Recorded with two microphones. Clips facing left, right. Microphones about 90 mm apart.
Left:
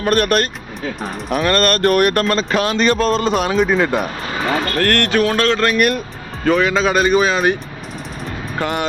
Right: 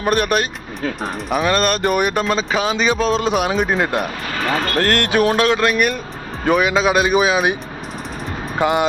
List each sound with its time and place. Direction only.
0.0 s speech: 5° right (ahead or behind)
4.8 s speech: 20° right (ahead or behind); by 6.0 s centre (ahead or behind)
6.4 s speech: 15° right (ahead or behind)
8.5 s speech: 15° right (ahead or behind)